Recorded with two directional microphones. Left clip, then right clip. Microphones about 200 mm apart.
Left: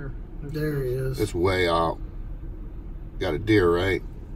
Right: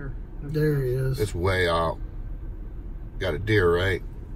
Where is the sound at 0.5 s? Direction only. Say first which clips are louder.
Right 3 dB; 15° left (ahead or behind).